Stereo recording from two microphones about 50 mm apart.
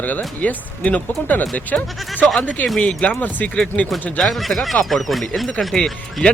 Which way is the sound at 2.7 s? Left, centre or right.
Left.